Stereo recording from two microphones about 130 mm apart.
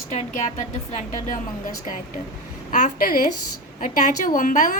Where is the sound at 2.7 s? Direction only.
85° left.